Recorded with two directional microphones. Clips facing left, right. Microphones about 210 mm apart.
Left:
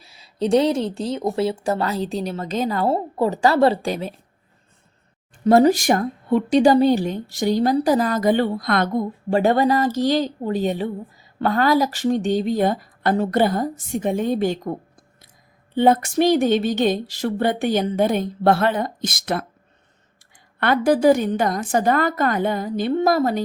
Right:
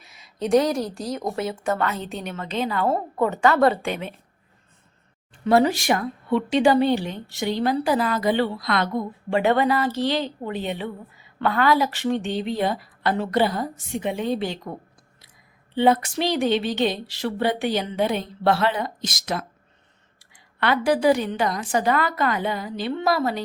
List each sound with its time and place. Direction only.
0.0 s a woman's voice: 30° left (ahead or behind)
5.5 s a woman's voice: 45° left (ahead or behind)
15.7 s a woman's voice: 45° left (ahead or behind)
20.6 s a woman's voice: 50° left (ahead or behind)